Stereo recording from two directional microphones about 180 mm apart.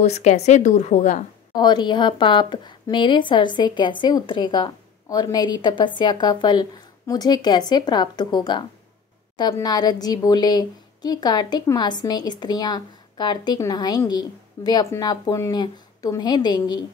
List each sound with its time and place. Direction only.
0.0 s a woman's voice: 40° left (ahead or behind)
1.5 s a woman's voice: 25° left (ahead or behind)